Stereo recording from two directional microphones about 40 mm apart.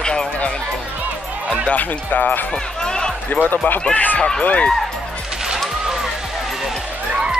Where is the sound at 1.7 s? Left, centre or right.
Left.